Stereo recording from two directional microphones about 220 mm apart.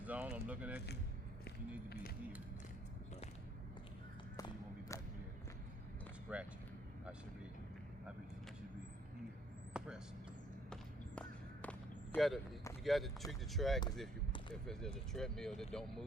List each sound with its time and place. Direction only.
0.0 s speech: 5° right (ahead or behind)
4.4 s a sound: 15° left (ahead or behind)
6.3 s speech: 5° right (ahead or behind)
9.7 s vehicle: 5° right (ahead or behind)
10.7 s a sound: 5° left (ahead or behind)
12.1 s speech: centre (ahead or behind)
15.1 s speech: centre (ahead or behind)